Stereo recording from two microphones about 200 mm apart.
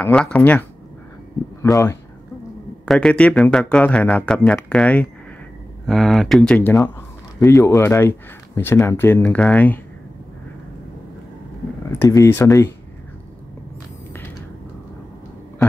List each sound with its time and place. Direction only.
0.0 s speech: 5° left (ahead or behind)
2.8 s speech: 5° left (ahead or behind)
11.9 s speech: 15° left (ahead or behind)